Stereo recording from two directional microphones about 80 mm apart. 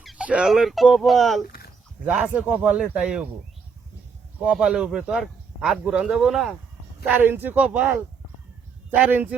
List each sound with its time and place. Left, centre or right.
0.2 s a sound: centre
0.4 s speech: centre
2.0 s a man's voice: centre
4.5 s a man's voice: centre
5.2 s a sound: centre
5.8 s a man's voice: centre
7.1 s speech: right
8.9 s speech: right